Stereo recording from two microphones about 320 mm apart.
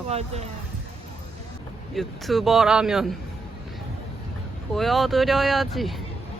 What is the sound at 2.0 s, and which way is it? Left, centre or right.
Speech, centre.